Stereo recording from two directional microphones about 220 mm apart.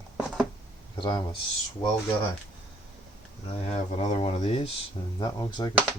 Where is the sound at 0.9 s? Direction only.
20° left (ahead or behind).